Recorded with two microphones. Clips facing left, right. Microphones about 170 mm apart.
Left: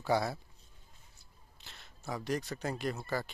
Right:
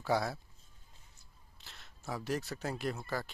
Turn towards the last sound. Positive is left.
turn(degrees=0)  # may be behind; listen again after turning